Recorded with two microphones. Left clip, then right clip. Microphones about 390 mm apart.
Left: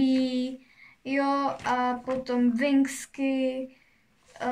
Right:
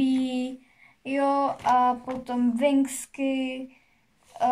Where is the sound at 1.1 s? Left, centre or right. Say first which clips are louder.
Right 2 dB; centre.